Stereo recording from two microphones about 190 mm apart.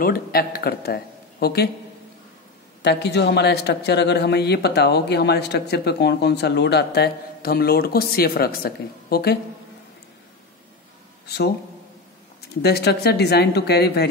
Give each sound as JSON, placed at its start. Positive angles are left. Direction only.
{"t": 0.0, "sound": "a man's voice", "side_deg": 55}
{"t": 2.8, "sound": "a man's voice", "side_deg": 65}
{"t": 11.2, "sound": "speech", "side_deg": 60}
{"t": 12.6, "sound": "a man's voice", "side_deg": 60}